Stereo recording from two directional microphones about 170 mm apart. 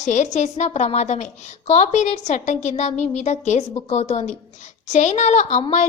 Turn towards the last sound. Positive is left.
turn(degrees=45)  # may be behind; listen again after turning